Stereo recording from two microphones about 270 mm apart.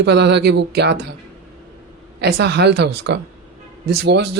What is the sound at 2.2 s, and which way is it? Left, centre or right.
Speech, right.